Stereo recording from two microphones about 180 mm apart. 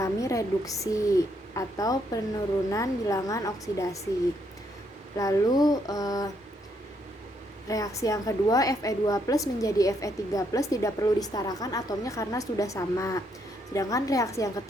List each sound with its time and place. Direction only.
0.0 s a woman's voice: 15° left (ahead or behind)
5.1 s a woman's voice: 20° left (ahead or behind)
7.7 s a woman's voice: 20° left (ahead or behind)